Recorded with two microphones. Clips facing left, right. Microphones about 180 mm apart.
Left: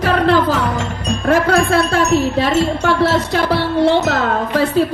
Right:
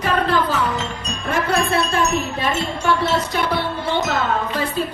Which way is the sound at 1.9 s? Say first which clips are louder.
Left 6 dB; 85° left.